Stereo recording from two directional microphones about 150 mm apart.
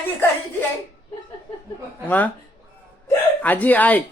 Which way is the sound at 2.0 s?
10° left (ahead or behind).